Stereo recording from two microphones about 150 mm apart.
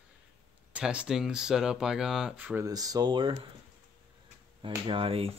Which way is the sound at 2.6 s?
25° right (ahead or behind).